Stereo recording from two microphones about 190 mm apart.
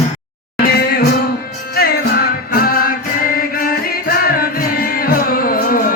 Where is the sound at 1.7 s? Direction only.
55° left (ahead or behind).